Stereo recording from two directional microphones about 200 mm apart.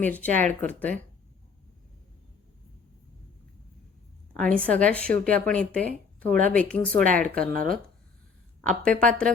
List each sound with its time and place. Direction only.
0.0 s speech: 10° left (ahead or behind)
4.4 s speech: 5° left (ahead or behind)
6.9 s speech: 40° right (ahead or behind)
7.2 s speech: 5° left (ahead or behind)
7.5 s speech: 45° right (ahead or behind)
9.0 s speech: 5° left (ahead or behind)